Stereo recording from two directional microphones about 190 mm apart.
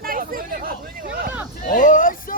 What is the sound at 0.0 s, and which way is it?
Hubbub, 50° right (ahead or behind).